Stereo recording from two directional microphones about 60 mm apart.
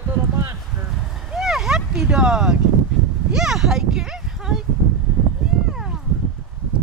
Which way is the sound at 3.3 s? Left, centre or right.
Centre.